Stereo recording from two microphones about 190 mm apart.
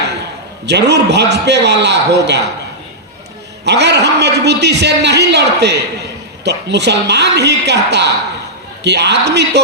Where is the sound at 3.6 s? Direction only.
65° right (ahead or behind).